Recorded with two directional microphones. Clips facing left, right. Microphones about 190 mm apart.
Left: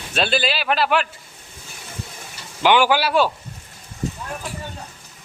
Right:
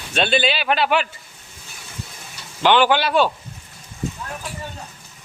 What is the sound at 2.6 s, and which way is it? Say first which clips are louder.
Speech: even; 10° left (ahead or behind).